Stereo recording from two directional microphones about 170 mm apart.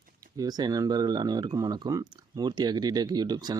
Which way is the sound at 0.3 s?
20° right (ahead or behind).